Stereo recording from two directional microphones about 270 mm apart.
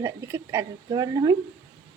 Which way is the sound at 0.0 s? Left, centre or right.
Centre.